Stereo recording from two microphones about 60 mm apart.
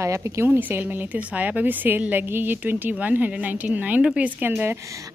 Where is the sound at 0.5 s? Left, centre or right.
Right.